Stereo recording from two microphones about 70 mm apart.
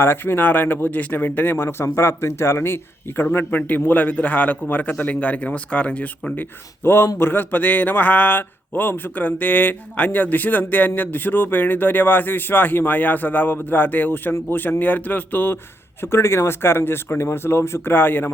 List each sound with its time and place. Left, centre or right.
0.0 s speech: left